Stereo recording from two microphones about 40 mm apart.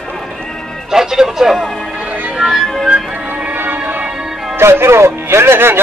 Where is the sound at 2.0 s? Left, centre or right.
Right.